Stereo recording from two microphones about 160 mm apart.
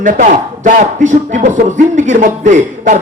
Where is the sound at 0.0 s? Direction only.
50° right (ahead or behind).